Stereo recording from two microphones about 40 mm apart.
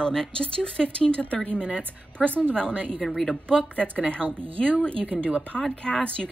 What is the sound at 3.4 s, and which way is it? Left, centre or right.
A woman's voice, left.